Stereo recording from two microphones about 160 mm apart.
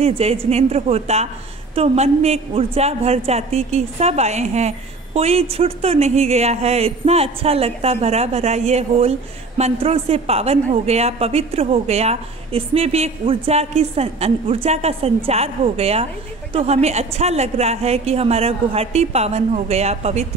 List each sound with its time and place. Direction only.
0.0 s a woman's voice: 40° right (ahead or behind)